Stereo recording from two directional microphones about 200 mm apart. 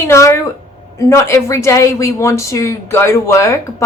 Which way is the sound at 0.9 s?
15° left (ahead or behind).